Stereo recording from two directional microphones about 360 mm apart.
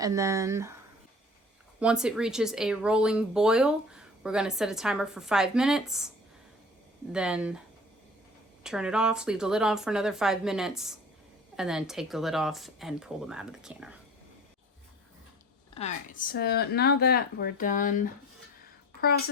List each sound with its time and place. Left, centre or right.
0.0 s speech: centre
1.8 s speech: centre
7.1 s speech: centre
8.6 s speech: centre
15.7 s speech: centre